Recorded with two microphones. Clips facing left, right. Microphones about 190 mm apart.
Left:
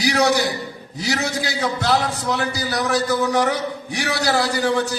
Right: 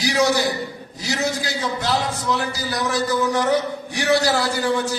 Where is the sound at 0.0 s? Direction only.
65° left (ahead or behind).